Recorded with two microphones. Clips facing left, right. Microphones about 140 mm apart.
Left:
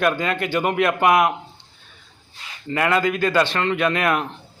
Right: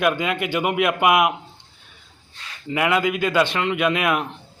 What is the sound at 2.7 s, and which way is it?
Speech, 5° right (ahead or behind).